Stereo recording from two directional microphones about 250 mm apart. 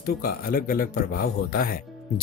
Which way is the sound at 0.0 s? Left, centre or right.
Left.